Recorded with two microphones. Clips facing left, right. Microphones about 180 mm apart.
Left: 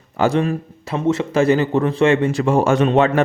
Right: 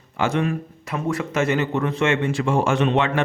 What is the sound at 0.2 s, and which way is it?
Speech, 35° left (ahead or behind).